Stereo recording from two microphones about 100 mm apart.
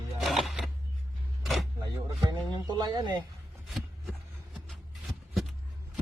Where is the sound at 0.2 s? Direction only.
Centre (ahead or behind).